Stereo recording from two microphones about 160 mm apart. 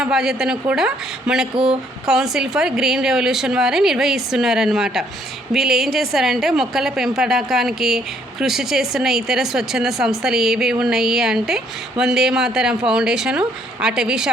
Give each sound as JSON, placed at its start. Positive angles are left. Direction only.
{"t": 0.0, "sound": "a woman's voice", "side_deg": -5}